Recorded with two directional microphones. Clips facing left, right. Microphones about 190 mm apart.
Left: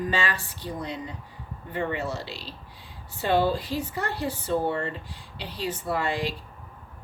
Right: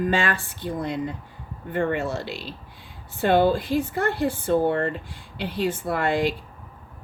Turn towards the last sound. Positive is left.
turn(degrees=-55)  # may be behind; listen again after turning